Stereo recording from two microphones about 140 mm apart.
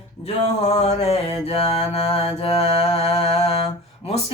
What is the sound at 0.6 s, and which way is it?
Mantra, 50° left (ahead or behind).